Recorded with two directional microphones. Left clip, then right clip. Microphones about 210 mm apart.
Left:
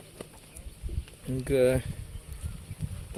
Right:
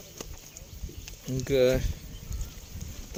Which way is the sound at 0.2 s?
50° right (ahead or behind).